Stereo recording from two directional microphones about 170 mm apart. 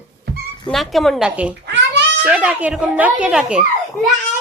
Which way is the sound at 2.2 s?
10° right (ahead or behind).